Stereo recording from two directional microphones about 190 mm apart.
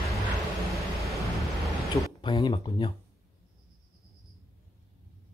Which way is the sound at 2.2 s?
20° left (ahead or behind).